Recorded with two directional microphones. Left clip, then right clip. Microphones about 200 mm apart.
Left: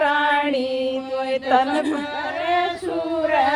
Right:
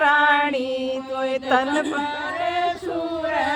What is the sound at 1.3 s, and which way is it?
Music, 5° right (ahead or behind).